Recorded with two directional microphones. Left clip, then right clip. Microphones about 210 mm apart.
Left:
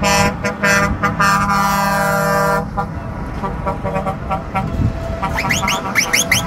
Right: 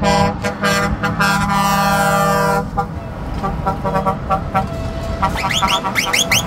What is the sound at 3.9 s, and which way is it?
Vehicle, 35° right (ahead or behind).